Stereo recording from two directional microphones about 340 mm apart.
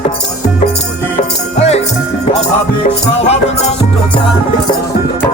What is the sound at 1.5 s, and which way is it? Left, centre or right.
Music, centre.